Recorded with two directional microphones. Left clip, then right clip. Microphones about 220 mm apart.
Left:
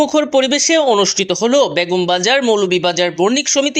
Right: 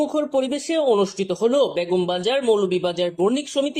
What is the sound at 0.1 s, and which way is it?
Speech, 15° left (ahead or behind).